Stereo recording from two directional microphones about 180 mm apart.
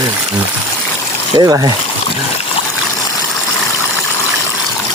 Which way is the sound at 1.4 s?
25° right (ahead or behind).